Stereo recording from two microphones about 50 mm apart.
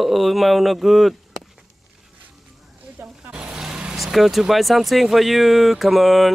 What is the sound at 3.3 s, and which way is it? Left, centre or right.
Vehicle, centre.